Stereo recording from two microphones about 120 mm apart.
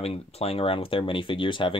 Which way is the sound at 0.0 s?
55° left (ahead or behind).